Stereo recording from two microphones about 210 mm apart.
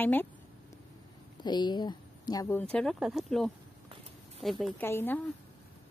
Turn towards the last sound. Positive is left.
turn(degrees=10)  # may be behind; listen again after turning